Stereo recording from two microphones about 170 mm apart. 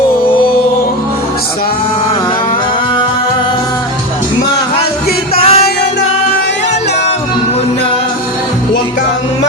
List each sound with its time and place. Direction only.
5.4 s music: 35° left (ahead or behind)